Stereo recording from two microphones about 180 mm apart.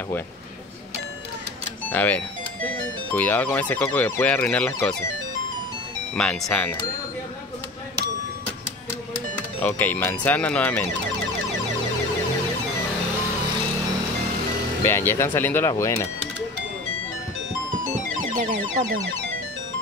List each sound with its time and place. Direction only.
1.9 s speech: 10° left (ahead or behind)
6.1 s speech: 5° left (ahead or behind)
9.6 s speech: 10° left (ahead or behind)
14.9 s speech: 15° left (ahead or behind)
18.4 s a sound: 45° right (ahead or behind)